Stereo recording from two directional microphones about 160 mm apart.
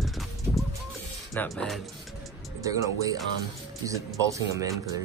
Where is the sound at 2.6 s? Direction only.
20° right (ahead or behind).